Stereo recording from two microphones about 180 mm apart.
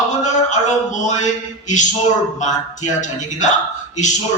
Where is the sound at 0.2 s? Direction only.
40° left (ahead or behind).